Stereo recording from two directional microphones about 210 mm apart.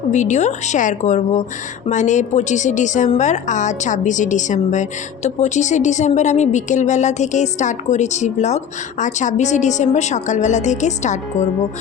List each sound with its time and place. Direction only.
0.1 s a woman's voice: 35° left (ahead or behind)